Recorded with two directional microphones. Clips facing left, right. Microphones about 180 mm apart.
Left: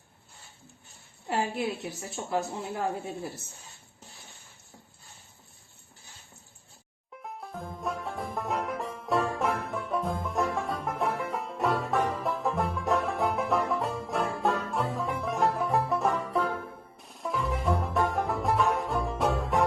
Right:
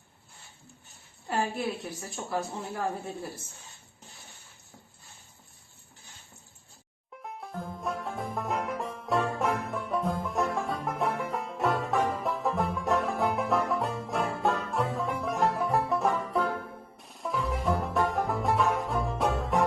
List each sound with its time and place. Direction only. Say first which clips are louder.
1.3 s a woman's voice: left 1 dB; 25° left (ahead or behind)
7.2 s music: right 1 dB; centre (ahead or behind)